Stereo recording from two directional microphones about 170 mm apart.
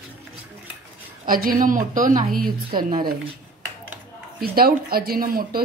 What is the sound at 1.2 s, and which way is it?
Speech, 55° right (ahead or behind).